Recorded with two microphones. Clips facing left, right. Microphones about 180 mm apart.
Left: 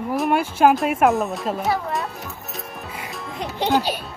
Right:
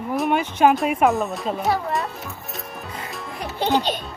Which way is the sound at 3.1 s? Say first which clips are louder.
Left 1 dB; centre (ahead or behind).